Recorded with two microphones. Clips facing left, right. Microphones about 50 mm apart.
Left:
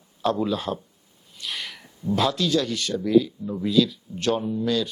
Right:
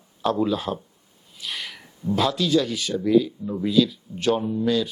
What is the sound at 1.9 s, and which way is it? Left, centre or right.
Speech, centre.